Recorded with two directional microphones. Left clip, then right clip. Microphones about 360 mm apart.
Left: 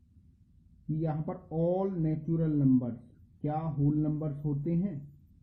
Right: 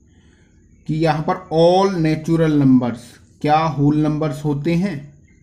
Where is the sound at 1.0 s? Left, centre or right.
Centre.